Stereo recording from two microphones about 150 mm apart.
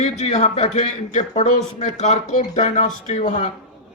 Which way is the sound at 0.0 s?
45° left (ahead or behind).